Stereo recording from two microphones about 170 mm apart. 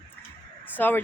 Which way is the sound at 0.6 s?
10° left (ahead or behind).